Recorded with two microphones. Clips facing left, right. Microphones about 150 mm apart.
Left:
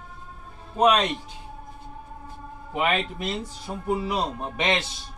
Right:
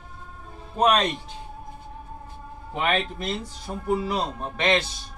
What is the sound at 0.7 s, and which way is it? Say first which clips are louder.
Speech: left 1 dB; 5° left (ahead or behind).